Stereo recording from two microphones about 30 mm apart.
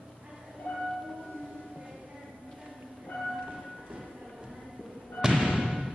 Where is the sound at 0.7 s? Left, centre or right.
Left.